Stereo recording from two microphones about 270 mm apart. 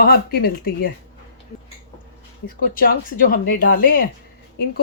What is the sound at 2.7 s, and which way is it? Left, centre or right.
A woman's voice, left.